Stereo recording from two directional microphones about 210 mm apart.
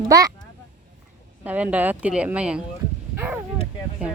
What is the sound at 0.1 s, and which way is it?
Speech, 15° right (ahead or behind).